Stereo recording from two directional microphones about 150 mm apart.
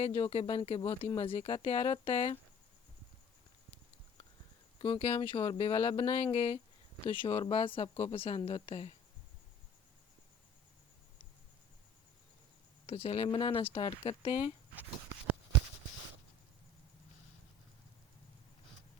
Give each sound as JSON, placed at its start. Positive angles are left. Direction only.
{"t": 0.1, "sound": "speech", "side_deg": 40}
{"t": 4.8, "sound": "speech", "side_deg": 35}
{"t": 12.8, "sound": "speech", "side_deg": 40}